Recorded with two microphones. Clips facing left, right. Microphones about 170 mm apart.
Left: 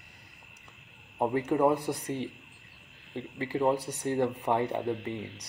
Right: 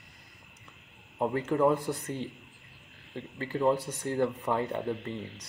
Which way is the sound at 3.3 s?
15° left (ahead or behind).